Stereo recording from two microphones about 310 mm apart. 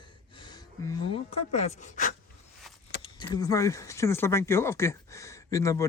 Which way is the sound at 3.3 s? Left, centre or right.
Centre.